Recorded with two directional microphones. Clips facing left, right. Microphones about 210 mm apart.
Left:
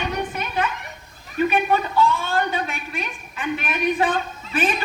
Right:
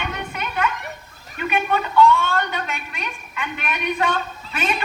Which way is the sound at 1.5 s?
35° left (ahead or behind).